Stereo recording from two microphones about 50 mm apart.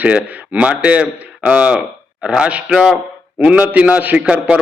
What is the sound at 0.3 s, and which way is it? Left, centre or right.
A man's voice, right.